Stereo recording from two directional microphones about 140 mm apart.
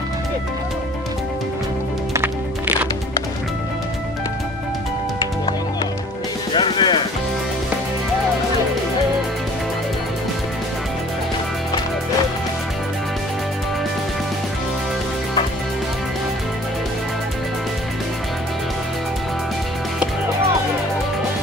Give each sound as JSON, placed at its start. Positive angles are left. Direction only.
{"t": 6.5, "sound": "music", "side_deg": 35}